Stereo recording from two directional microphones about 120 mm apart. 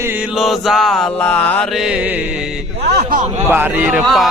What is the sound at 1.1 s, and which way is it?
Mantra, 15° left (ahead or behind).